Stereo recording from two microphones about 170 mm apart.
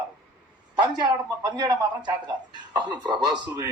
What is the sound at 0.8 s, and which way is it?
A man's voice, 25° right (ahead or behind).